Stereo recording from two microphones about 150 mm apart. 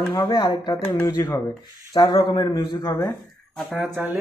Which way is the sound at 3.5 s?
Centre (ahead or behind).